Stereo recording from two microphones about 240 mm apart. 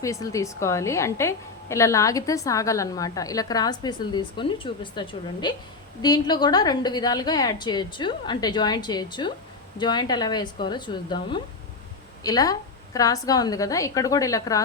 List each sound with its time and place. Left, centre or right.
0.0 s a woman's voice: centre